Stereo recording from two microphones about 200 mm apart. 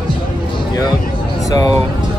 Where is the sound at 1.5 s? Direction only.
20° left (ahead or behind).